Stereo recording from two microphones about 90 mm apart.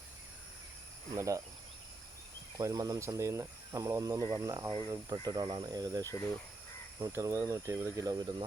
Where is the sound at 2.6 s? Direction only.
40° right (ahead or behind).